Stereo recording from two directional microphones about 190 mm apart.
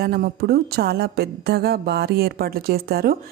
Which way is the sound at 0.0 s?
55° right (ahead or behind).